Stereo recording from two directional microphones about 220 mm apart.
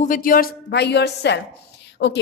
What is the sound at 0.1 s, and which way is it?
A woman's voice, 40° left (ahead or behind).